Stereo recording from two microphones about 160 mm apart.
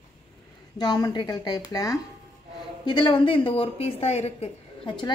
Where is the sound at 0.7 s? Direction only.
25° left (ahead or behind).